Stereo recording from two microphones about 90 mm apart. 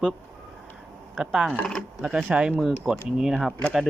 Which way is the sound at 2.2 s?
15° right (ahead or behind).